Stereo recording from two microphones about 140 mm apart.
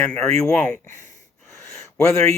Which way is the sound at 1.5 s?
20° left (ahead or behind).